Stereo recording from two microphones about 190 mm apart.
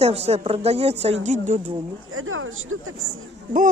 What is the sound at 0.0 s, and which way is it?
Speech, 35° right (ahead or behind).